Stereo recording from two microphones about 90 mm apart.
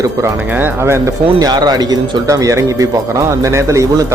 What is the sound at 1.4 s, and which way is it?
Speech, 50° right (ahead or behind).